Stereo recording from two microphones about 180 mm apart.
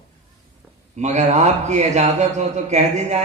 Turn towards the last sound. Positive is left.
turn(degrees=-40)  # may be behind; listen again after turning